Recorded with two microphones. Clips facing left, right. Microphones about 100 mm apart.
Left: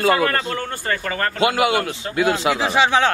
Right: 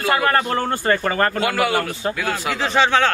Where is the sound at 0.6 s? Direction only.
40° right (ahead or behind).